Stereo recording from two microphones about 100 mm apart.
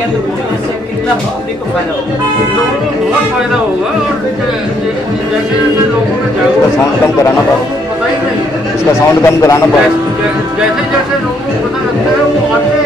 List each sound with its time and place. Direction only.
9.2 s speech: 30° left (ahead or behind)